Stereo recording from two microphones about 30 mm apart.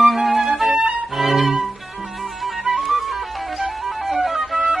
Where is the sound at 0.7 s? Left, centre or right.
Right.